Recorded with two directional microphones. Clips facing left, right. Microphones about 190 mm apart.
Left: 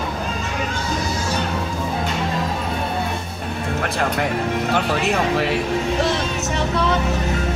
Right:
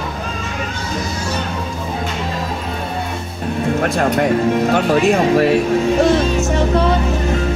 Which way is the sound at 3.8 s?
45° right (ahead or behind).